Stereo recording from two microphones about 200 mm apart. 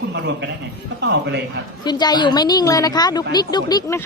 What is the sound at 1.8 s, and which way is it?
A woman's voice, 20° left (ahead or behind).